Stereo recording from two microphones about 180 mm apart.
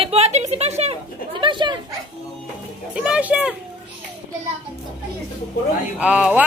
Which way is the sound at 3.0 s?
5° right (ahead or behind).